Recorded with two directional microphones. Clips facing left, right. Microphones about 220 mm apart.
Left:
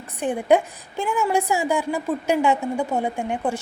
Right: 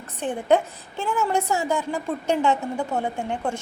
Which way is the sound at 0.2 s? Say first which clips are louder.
Left 2 dB; 10° left (ahead or behind).